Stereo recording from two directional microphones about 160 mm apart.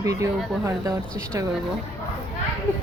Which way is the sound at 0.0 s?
20° right (ahead or behind).